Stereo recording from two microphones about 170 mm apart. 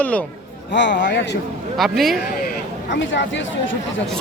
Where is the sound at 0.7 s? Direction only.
90° left.